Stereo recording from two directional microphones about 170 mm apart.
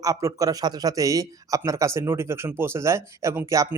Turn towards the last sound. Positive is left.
turn(degrees=-20)  # may be behind; listen again after turning